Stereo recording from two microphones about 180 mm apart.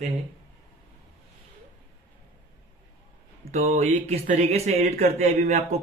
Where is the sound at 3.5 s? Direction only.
35° right (ahead or behind).